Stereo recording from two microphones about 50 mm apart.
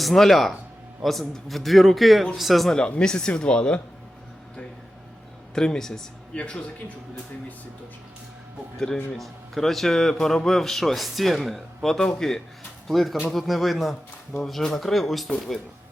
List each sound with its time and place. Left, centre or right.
0.0 s a man's voice: centre
2.6 s speech: centre
5.5 s speech: centre
9.1 s a man's voice: centre